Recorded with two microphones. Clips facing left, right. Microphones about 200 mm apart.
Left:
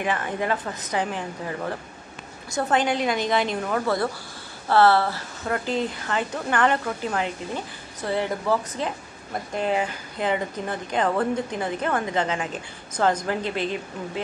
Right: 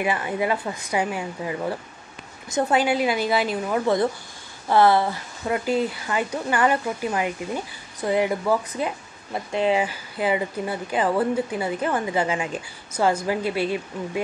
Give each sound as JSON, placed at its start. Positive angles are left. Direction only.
{"t": 0.0, "sound": "speech", "side_deg": -10}
{"t": 3.8, "sound": "speech", "side_deg": -20}